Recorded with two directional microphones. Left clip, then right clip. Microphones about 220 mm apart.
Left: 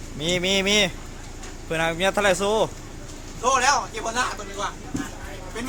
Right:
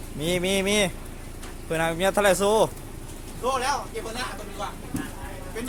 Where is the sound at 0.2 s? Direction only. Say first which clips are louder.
Left 2 dB; 5° right (ahead or behind).